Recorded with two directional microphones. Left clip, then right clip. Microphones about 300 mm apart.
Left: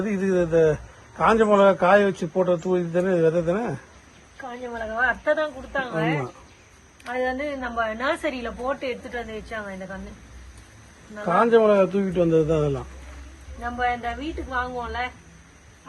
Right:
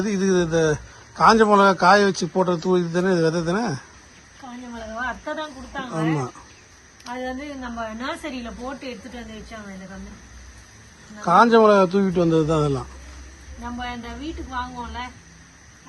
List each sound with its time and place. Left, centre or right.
0.1 s a man's voice: centre
4.9 s a man's voice: centre
11.3 s a man's voice: centre